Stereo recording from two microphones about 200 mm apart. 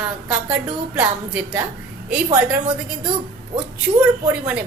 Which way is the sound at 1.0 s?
10° right (ahead or behind).